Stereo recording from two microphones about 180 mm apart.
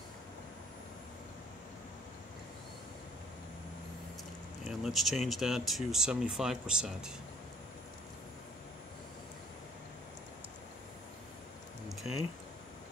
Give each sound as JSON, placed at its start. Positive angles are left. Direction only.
{"t": 4.6, "sound": "speech", "side_deg": 0}